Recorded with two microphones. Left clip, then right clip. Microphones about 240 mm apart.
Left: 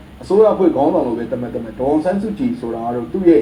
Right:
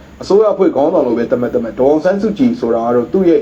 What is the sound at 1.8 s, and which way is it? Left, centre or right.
A man's voice, right.